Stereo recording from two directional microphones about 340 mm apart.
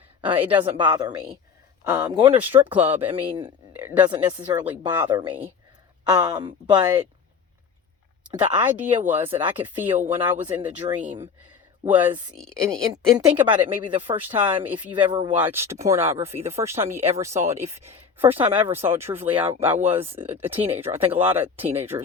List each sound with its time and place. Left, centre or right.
0.3 s speech: centre
8.3 s speech: centre
12.4 s a woman's voice: centre
19.9 s speech: centre